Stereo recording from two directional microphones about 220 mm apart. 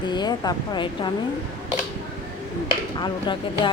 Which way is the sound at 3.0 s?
20° left (ahead or behind).